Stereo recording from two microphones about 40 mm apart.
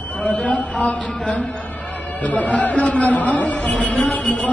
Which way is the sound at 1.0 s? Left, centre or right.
Left.